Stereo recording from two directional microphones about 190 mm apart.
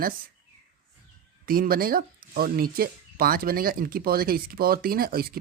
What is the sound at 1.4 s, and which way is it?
Speech, 50° right (ahead or behind).